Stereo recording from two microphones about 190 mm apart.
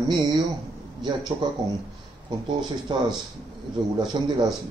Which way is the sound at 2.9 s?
25° right (ahead or behind).